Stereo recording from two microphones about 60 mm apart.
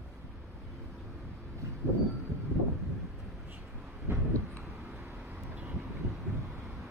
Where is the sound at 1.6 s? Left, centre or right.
Right.